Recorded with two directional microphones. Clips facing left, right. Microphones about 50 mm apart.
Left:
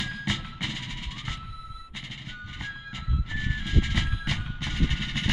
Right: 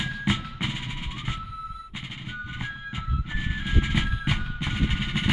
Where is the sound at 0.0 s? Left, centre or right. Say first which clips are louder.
Right 4 dB; centre.